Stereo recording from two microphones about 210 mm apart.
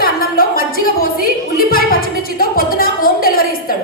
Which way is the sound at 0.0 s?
45° left (ahead or behind).